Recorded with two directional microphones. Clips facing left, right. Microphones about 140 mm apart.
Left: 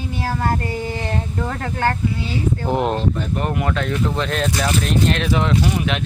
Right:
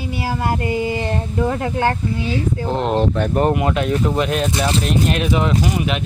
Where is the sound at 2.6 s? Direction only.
15° left (ahead or behind).